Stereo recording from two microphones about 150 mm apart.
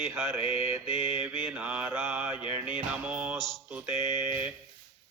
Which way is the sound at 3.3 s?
Centre (ahead or behind).